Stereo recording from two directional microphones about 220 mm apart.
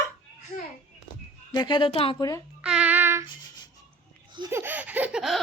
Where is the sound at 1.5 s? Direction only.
20° left (ahead or behind).